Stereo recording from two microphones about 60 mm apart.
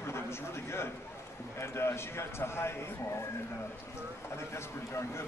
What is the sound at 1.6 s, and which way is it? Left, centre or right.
A man's voice, left.